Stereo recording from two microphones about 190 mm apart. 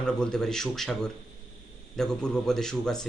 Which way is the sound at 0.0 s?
5° left (ahead or behind).